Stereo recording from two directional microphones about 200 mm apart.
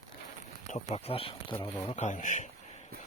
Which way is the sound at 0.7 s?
30° left (ahead or behind).